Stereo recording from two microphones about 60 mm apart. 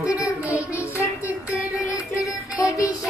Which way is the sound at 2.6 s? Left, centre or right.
Left.